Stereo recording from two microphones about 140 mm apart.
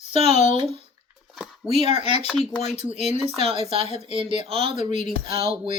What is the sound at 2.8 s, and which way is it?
Speech, 50° left (ahead or behind).